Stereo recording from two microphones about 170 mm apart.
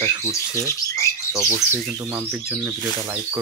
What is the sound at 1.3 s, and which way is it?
Speech, 20° right (ahead or behind).